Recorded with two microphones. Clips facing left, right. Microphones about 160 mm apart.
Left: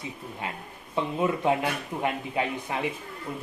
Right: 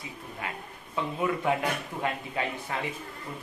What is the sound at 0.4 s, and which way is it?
A man's voice, 25° left (ahead or behind).